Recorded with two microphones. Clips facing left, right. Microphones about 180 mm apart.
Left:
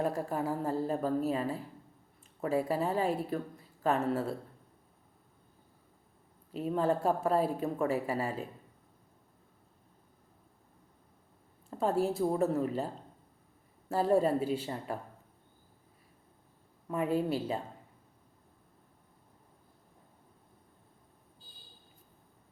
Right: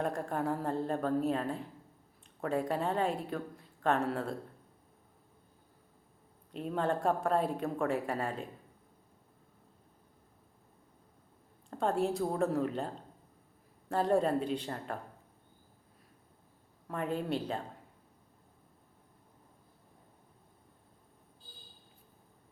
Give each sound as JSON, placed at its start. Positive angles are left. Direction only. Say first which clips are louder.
{"t": 0.0, "sound": "a woman's voice", "louder": "left 1 dB", "side_deg": 5}
{"t": 6.5, "sound": "a woman's voice", "louder": "left 3 dB", "side_deg": 5}
{"t": 11.7, "sound": "a woman's voice", "louder": "left 1 dB", "side_deg": 5}
{"t": 13.9, "sound": "a woman's voice", "louder": "left 2 dB", "side_deg": 5}
{"t": 16.9, "sound": "a woman's voice", "louder": "left 4 dB", "side_deg": 5}